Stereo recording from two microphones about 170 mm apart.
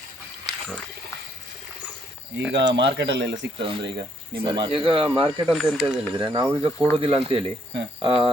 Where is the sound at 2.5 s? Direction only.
90° right.